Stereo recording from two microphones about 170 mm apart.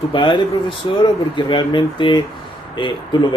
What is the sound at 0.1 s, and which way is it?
Speech, 30° left (ahead or behind).